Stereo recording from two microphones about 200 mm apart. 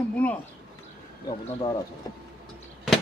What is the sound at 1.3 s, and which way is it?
Speech, 20° left (ahead or behind).